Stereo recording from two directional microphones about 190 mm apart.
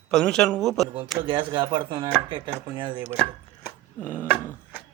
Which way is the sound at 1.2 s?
25° right (ahead or behind).